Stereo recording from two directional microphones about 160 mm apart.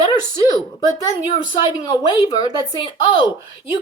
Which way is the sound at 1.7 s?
25° left (ahead or behind).